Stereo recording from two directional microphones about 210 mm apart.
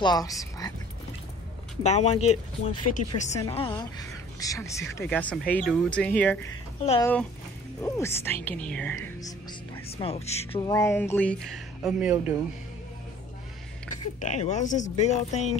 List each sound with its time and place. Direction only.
0.0 s a woman's voice: 20° left (ahead or behind)
1.8 s a woman's voice: 30° left (ahead or behind)
10.5 s a woman's voice: 20° left (ahead or behind); by 12.4 s 5° right (ahead or behind)
13.8 s speech: 35° left (ahead or behind)